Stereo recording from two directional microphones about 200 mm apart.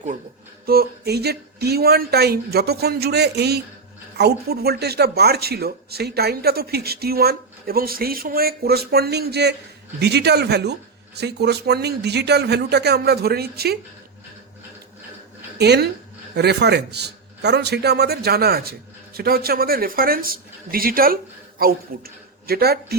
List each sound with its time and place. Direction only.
0.6 s a man's voice: 50° right (ahead or behind)
15.5 s a man's voice: 55° right (ahead or behind)